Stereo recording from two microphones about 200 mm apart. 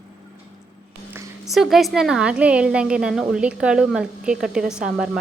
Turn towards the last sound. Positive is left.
turn(degrees=-5)  # may be behind; listen again after turning